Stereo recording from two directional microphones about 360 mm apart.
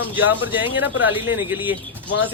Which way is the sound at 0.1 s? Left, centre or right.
Centre.